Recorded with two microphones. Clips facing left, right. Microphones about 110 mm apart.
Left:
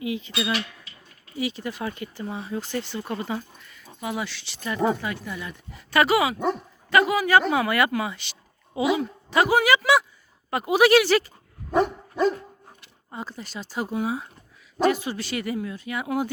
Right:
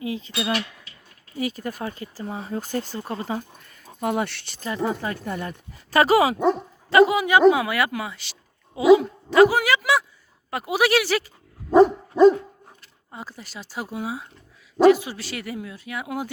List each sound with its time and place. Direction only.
0.0 s speech: 35° right (ahead or behind); by 4.6 s 55° right (ahead or behind)
4.9 s speech: 40° right (ahead or behind)
6.4 s speech: 25° right (ahead or behind); by 11.3 s 5° right (ahead or behind)
11.7 s dog: 30° right (ahead or behind)
13.1 s speech: 5° right (ahead or behind)